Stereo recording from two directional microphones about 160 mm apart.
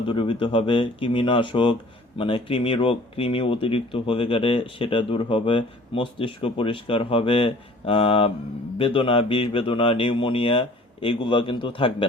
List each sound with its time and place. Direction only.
0.1 s speech: 30° left (ahead or behind)